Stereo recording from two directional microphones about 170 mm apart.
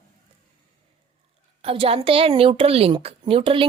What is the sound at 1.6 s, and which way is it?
A woman's voice, 35° right (ahead or behind).